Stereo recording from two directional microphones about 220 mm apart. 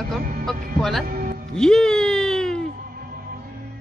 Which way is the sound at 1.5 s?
Centre (ahead or behind).